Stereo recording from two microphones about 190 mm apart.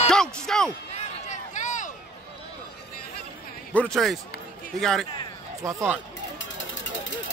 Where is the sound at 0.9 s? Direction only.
40° left (ahead or behind).